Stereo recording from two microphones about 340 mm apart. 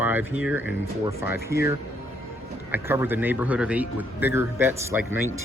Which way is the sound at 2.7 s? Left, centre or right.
Centre.